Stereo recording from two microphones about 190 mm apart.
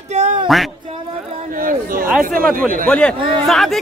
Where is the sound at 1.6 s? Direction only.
45° right (ahead or behind).